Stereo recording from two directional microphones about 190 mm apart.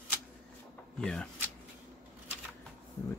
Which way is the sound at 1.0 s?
5° left (ahead or behind).